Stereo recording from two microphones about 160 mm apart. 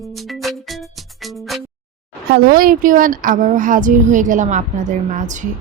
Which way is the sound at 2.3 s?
70° right (ahead or behind).